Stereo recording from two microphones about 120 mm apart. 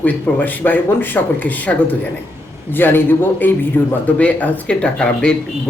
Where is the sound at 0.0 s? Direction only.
15° left (ahead or behind).